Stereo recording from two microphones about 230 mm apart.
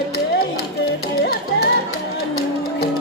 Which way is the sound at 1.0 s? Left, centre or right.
Left.